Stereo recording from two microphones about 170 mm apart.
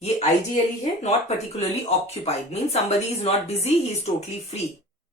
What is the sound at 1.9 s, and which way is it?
A woman's voice, 40° left (ahead or behind).